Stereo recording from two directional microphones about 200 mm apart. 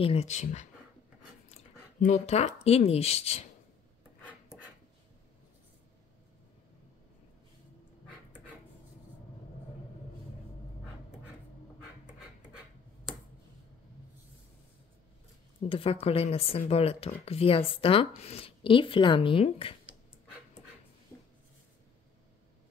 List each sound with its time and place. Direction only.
0.0 s speech: 30° left (ahead or behind)
13.1 s a sound: centre (ahead or behind)
15.7 s speech: 30° left (ahead or behind)